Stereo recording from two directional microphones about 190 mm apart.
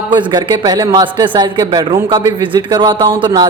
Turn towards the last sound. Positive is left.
turn(degrees=-25)  # may be behind; listen again after turning